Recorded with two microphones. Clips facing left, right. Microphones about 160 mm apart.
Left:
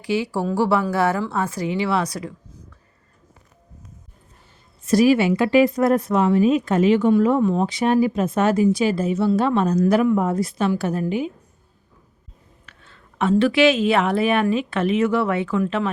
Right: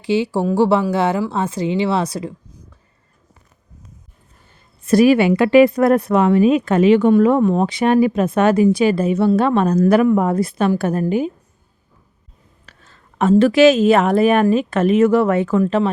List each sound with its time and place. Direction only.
0.0 s speech: 25° right (ahead or behind)
4.8 s a woman's voice: 55° right (ahead or behind)
12.6 s a sound: 40° right (ahead or behind)
13.4 s a woman's voice: 40° right (ahead or behind)